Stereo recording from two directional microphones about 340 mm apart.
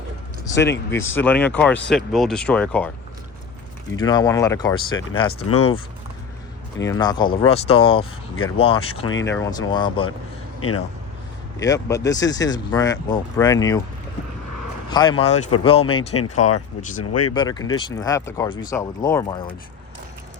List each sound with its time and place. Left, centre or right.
0.5 s speech: left
0.9 s speech: centre
3.9 s speech: centre
6.8 s speech: centre
10.6 s speech: left
11.6 s speech: centre
14.8 s speech: centre
17.0 s speech: left
17.3 s speech: centre